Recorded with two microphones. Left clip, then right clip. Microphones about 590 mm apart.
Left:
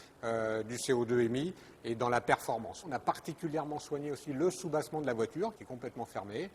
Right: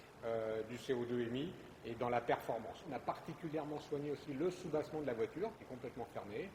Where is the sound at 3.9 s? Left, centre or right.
Left.